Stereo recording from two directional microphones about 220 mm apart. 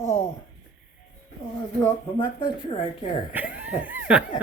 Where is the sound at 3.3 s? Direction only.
5° right (ahead or behind).